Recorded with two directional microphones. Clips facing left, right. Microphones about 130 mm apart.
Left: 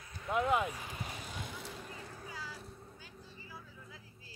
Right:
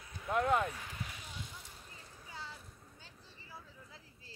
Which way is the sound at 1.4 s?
80° left.